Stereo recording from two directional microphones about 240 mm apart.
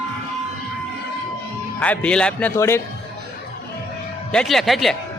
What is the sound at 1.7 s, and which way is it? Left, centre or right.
Speech, centre.